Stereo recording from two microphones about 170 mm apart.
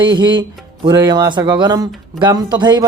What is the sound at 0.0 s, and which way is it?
Speech, 25° right (ahead or behind).